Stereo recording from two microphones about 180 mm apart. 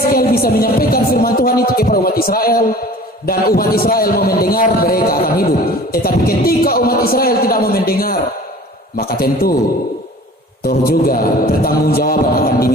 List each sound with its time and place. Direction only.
0.1 s a sound: 55° left (ahead or behind)
3.2 s a man's voice: 55° left (ahead or behind)
10.7 s a man's voice: 55° left (ahead or behind)